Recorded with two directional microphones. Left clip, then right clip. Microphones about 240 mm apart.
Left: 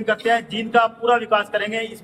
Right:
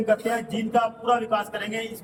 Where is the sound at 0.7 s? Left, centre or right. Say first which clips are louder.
Left 5 dB; centre.